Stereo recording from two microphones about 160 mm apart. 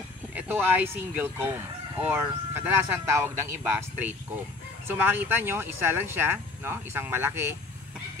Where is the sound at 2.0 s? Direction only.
15° right (ahead or behind).